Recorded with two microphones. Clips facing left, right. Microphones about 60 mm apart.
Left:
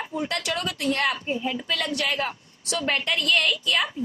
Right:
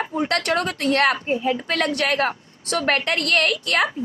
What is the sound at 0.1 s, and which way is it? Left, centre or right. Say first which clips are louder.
Speech: right 5 dB; right.